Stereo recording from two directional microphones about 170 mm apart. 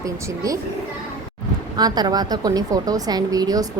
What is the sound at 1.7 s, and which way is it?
A woman's voice, 25° right (ahead or behind).